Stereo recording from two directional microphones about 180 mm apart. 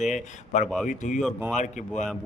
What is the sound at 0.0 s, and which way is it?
A man's voice, 40° left (ahead or behind).